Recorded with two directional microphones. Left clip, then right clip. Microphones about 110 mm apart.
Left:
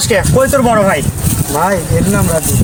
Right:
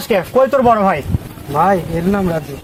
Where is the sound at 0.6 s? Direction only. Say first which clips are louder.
Left 1 dB; 25° right (ahead or behind).